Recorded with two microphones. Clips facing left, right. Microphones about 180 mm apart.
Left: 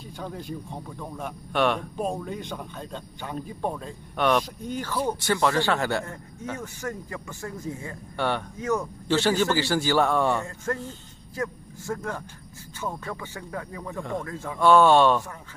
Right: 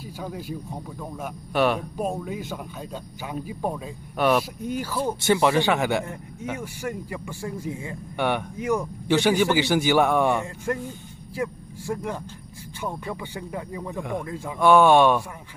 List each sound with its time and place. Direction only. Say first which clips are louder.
0.2 s speech: right 1 dB; 5° right (ahead or behind)